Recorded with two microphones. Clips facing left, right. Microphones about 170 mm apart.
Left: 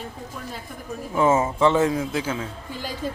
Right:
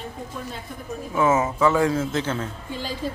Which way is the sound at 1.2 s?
30° left (ahead or behind).